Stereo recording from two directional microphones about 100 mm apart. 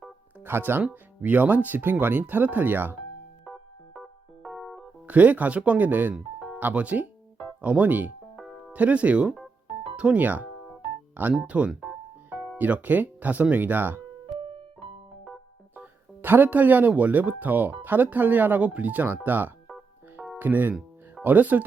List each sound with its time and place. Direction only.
0.3 s speech: 20° right (ahead or behind)
3.4 s keyboard: centre (ahead or behind)
5.0 s speech: 15° right (ahead or behind)
8.4 s music: centre (ahead or behind)
8.7 s speech: 15° right (ahead or behind)
11.2 s music: 15° right (ahead or behind)
12.5 s speech: 15° right (ahead or behind)
14.3 s piano: 65° right (ahead or behind)
15.7 s speech: 20° right (ahead or behind)